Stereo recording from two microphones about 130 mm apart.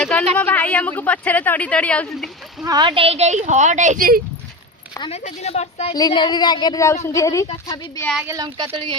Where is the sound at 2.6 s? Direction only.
30° right (ahead or behind).